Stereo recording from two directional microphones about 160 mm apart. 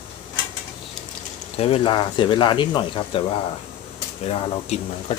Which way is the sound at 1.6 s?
35° left (ahead or behind).